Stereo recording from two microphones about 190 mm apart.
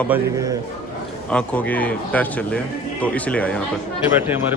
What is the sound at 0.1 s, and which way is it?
Speech, 15° right (ahead or behind).